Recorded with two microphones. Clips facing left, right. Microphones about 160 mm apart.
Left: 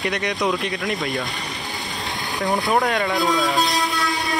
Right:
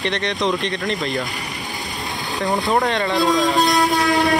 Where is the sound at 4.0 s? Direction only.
75° right (ahead or behind).